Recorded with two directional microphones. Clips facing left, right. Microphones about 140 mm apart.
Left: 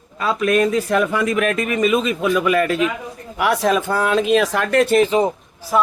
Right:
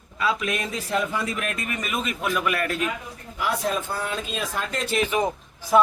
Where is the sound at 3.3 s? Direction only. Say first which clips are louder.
Left 8 dB; 75° left (ahead or behind).